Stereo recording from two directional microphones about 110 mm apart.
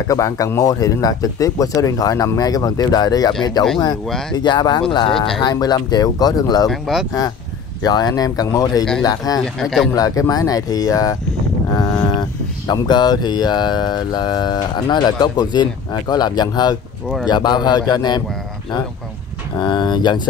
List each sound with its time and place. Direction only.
0.1 s speech: 30° left (ahead or behind); by 5.2 s 50° left (ahead or behind)
5.4 s speech: 40° left (ahead or behind)
6.7 s speech: 5° right (ahead or behind)
7.8 s speech: 35° left (ahead or behind)
9.6 s speech: centre (ahead or behind)
9.9 s speech: 30° left (ahead or behind)
19.6 s speech: 45° left (ahead or behind)